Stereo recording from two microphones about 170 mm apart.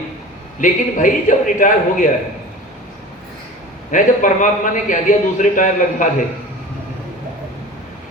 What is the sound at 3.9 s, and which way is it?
Speech, 50° left (ahead or behind).